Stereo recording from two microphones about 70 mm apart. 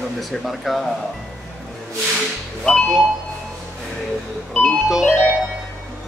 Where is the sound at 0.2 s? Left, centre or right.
Centre.